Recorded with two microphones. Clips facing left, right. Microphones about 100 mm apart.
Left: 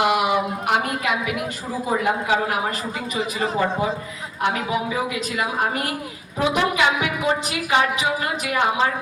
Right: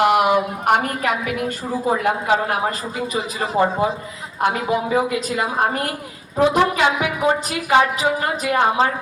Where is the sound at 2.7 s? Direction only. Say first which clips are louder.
Right 3 dB; 35° right (ahead or behind).